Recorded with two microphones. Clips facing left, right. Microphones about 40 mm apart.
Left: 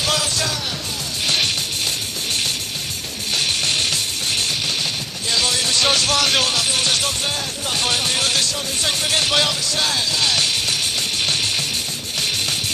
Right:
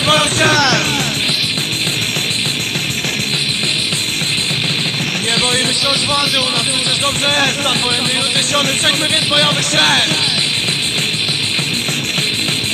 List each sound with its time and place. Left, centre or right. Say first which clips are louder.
0.0 s music: right 9 dB; right
0.6 s music: right 14 dB; right
5.9 s music: right 2 dB; centre
7.2 s speech: right 10 dB; right
9.3 s music: right 6 dB; right
9.8 s speech: right 10 dB; right